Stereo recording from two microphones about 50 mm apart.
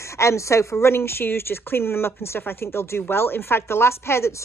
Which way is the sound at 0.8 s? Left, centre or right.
Left.